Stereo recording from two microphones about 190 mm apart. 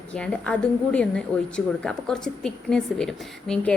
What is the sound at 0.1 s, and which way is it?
A woman's voice, 5° left (ahead or behind).